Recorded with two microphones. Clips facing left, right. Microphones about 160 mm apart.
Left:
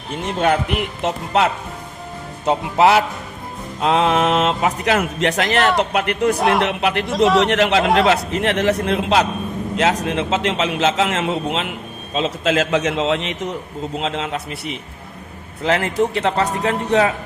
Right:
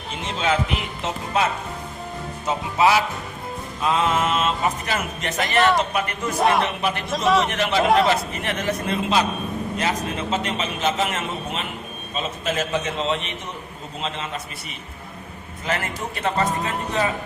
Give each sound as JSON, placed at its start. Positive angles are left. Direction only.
{"t": 0.3, "sound": "speech", "side_deg": 60}
{"t": 2.5, "sound": "speech", "side_deg": 65}
{"t": 5.5, "sound": "speech", "side_deg": 0}
{"t": 5.7, "sound": "speech", "side_deg": 70}
{"t": 6.3, "sound": "speech", "side_deg": 0}
{"t": 6.7, "sound": "a man's voice", "side_deg": 75}
{"t": 9.7, "sound": "a man's voice", "side_deg": 90}
{"t": 12.1, "sound": "a man's voice", "side_deg": 90}
{"t": 14.0, "sound": "a man's voice", "side_deg": 80}
{"t": 15.6, "sound": "speech", "side_deg": 70}